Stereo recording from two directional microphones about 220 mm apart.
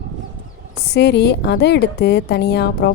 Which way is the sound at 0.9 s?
50° left (ahead or behind).